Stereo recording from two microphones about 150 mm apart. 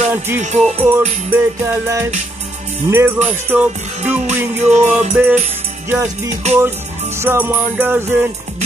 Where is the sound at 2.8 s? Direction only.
15° right (ahead or behind).